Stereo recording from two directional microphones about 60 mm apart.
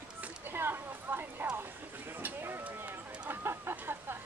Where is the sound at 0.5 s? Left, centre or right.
Right.